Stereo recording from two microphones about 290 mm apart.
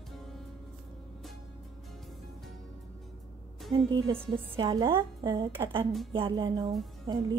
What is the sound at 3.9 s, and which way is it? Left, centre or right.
A woman's voice, centre.